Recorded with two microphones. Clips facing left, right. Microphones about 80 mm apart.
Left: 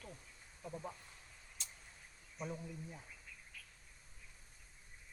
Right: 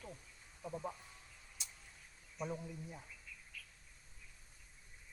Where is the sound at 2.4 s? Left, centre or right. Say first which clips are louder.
Right 2 dB; centre.